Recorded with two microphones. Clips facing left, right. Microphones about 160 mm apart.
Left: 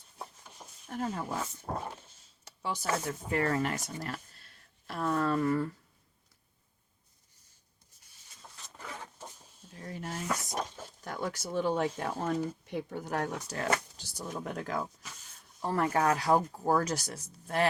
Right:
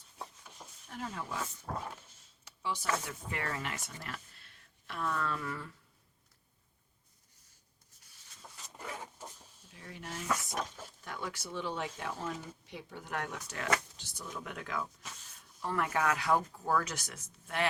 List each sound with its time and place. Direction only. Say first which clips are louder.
0.9 s speech: left 6 dB; 40° left (ahead or behind)
1.6 s dog: left 3 dB; 25° left (ahead or behind)
2.4 s speech: left 2 dB; 40° left (ahead or behind)
9.7 s speech: left 5 dB; 40° left (ahead or behind)